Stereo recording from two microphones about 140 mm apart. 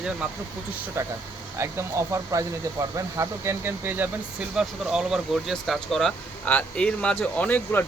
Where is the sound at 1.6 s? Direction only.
20° right (ahead or behind).